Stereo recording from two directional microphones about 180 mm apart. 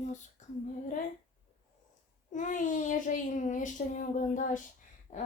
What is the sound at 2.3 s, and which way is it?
A child's voice, 45° left (ahead or behind).